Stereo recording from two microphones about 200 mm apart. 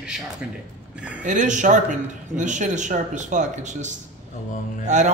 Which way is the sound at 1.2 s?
40° right (ahead or behind).